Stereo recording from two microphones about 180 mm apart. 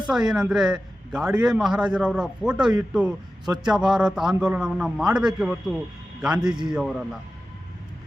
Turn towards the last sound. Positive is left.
turn(degrees=-5)  # may be behind; listen again after turning